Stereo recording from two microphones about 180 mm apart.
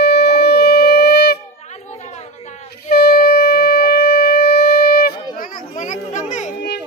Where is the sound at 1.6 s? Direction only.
40° left (ahead or behind).